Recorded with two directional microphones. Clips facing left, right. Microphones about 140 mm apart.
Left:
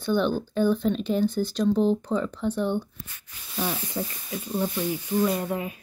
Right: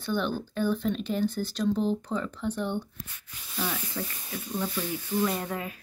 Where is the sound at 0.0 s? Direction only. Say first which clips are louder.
Left 5 dB; 25° left (ahead or behind).